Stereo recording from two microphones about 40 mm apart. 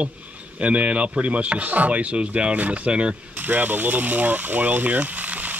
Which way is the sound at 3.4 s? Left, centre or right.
Right.